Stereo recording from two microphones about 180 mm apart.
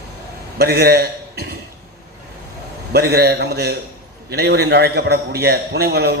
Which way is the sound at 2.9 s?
65° right (ahead or behind).